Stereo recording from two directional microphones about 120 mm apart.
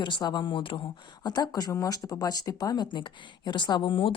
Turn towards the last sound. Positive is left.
turn(degrees=45)  # may be behind; listen again after turning